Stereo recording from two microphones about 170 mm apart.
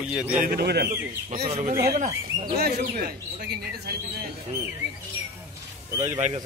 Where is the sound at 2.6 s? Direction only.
60° right (ahead or behind).